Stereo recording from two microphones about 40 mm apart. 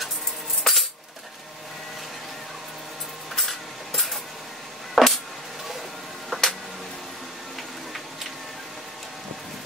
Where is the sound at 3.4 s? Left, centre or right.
Centre.